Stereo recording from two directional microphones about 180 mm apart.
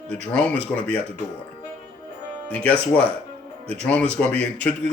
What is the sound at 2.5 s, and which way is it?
Speech, 5° left (ahead or behind).